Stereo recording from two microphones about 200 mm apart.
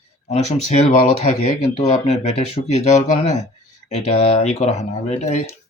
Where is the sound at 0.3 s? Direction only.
35° left (ahead or behind).